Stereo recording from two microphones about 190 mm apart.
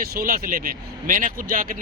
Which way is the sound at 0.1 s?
50° right (ahead or behind).